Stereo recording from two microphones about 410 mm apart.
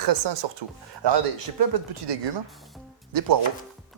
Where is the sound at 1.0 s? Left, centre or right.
Right.